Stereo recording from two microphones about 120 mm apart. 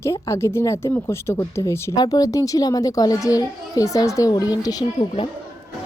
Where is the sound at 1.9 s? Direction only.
30° left (ahead or behind).